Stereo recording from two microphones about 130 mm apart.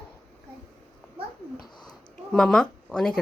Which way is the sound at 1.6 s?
35° left (ahead or behind).